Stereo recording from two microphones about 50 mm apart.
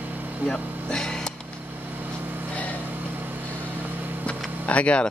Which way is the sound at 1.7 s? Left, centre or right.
Right.